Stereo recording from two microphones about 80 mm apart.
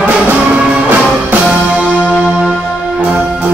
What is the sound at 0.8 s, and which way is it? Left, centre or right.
Music, right.